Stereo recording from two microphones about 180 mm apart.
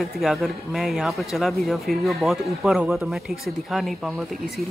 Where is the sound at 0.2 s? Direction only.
Centre (ahead or behind).